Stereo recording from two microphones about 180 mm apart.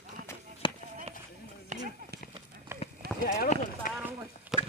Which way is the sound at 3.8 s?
50° left (ahead or behind).